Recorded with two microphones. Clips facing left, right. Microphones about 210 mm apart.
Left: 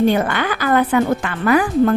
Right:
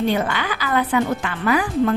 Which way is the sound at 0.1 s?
50° left (ahead or behind).